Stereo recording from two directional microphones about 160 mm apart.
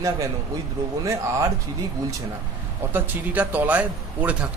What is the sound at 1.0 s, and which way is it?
Speech, 20° right (ahead or behind).